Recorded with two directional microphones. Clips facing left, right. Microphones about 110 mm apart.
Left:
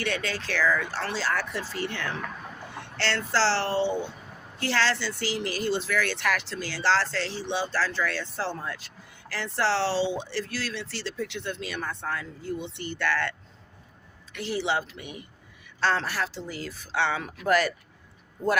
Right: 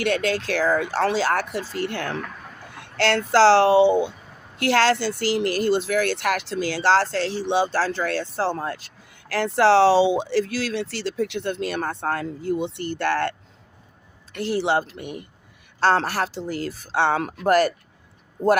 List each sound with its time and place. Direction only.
0.0 s speech: 50° right (ahead or behind)
1.5 s speech: 10° right (ahead or behind)
1.8 s speech: 60° right (ahead or behind)
7.4 s speech: 70° right (ahead or behind)
7.9 s speech: 50° right (ahead or behind)
14.6 s speech: 50° right (ahead or behind)
16.8 s speech: 40° right (ahead or behind)
17.2 s speech: 60° right (ahead or behind)
17.5 s speech: 45° right (ahead or behind)